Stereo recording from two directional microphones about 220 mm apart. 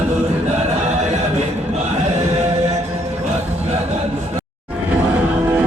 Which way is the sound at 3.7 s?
30° right (ahead or behind).